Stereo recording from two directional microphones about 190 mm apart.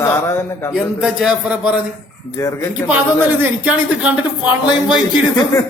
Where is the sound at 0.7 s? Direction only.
Centre (ahead or behind).